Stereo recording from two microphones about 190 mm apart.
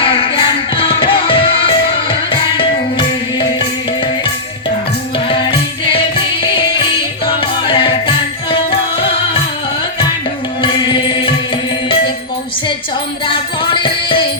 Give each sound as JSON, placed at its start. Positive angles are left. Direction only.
{"t": 0.0, "sound": "music", "side_deg": 30}
{"t": 5.3, "sound": "music", "side_deg": 30}
{"t": 7.6, "sound": "music", "side_deg": 25}
{"t": 10.6, "sound": "music", "side_deg": 25}
{"t": 13.2, "sound": "music", "side_deg": 25}